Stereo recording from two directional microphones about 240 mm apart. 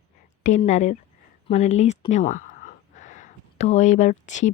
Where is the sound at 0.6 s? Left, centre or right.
Left.